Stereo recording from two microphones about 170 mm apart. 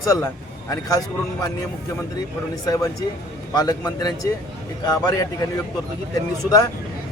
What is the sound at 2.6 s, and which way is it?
Speech, 20° left (ahead or behind).